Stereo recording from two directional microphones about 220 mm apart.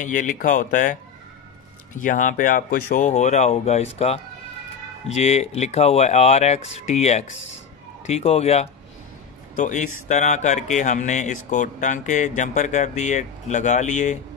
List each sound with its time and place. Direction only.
0.0 s speech: 35° left (ahead or behind)
2.0 s speech: 35° left (ahead or behind)